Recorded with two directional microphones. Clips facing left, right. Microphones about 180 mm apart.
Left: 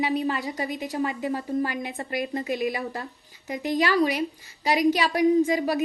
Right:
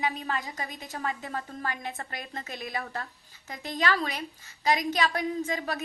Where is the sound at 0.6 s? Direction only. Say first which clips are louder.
Left 8 dB; 15° left (ahead or behind).